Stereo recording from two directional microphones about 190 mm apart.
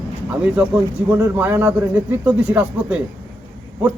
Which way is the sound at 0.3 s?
5° right (ahead or behind).